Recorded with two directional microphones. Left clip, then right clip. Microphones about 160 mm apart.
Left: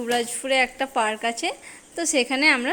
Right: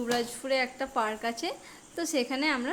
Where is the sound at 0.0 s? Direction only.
10° left (ahead or behind).